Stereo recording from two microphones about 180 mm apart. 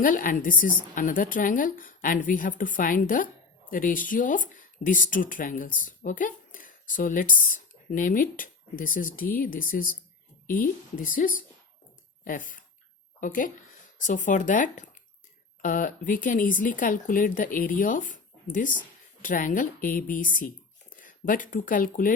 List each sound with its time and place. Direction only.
0.0 s a woman's voice: 50° left (ahead or behind)